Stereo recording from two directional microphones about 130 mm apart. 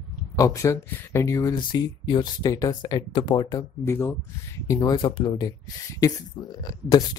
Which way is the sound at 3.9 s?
20° left (ahead or behind).